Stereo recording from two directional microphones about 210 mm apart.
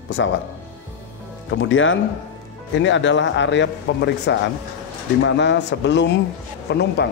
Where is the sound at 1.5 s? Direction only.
65° left (ahead or behind).